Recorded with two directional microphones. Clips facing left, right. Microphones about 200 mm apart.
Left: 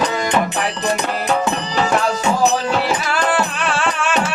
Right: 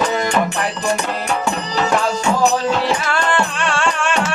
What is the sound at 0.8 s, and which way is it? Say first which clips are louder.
Music: left 1 dB; 20° left (ahead or behind).